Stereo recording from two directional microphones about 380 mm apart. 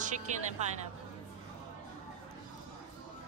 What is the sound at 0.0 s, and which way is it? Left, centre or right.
Speech, centre.